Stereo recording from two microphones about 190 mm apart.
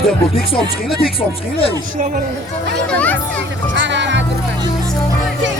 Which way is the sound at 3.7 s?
70° right (ahead or behind).